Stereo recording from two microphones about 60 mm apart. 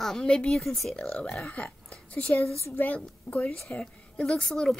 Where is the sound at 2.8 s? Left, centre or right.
Left.